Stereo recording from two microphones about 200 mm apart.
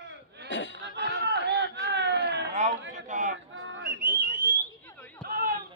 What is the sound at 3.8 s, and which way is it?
Whistling, 50° right (ahead or behind).